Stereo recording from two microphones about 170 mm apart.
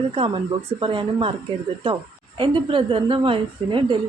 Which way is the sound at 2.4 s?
30° right (ahead or behind).